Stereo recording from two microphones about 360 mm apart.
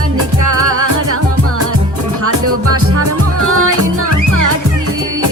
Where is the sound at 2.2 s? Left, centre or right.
Right.